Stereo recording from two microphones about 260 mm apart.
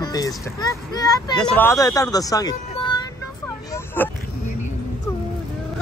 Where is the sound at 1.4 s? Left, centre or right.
Centre.